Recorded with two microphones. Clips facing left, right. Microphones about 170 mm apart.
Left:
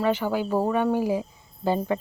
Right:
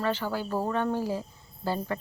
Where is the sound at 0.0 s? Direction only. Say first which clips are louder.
Left 5 dB; 15° left (ahead or behind).